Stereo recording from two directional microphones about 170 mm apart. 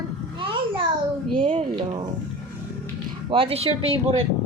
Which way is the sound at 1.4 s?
30° right (ahead or behind).